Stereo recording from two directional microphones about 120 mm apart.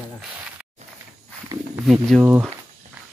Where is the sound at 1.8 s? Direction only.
5° right (ahead or behind).